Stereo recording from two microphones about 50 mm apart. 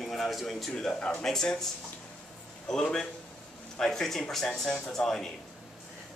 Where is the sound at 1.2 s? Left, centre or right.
Centre.